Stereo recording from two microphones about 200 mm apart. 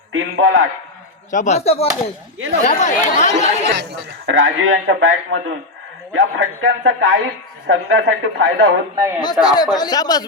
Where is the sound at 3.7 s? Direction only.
65° right (ahead or behind); by 8.7 s 90° right.